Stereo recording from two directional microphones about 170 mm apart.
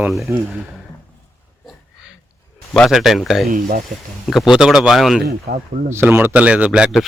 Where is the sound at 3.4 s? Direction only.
60° right (ahead or behind).